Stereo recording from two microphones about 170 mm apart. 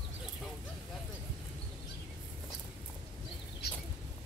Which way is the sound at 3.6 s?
70° left (ahead or behind).